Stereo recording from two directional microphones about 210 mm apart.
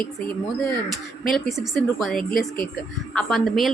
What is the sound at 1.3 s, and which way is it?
A woman's voice, centre (ahead or behind).